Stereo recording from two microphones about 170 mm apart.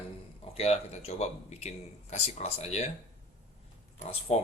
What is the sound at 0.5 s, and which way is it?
Speech, 35° left (ahead or behind).